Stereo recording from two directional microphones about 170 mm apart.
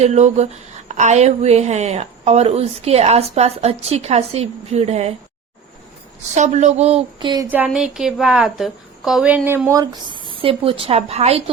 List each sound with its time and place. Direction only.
0.0 s a woman's voice: 40° right (ahead or behind)
6.3 s a woman's voice: 45° right (ahead or behind); by 7.4 s 25° right (ahead or behind)
7.5 s speech: 5° right (ahead or behind); by 11.5 s 40° right (ahead or behind)